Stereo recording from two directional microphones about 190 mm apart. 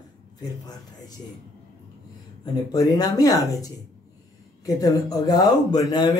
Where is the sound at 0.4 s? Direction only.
20° left (ahead or behind).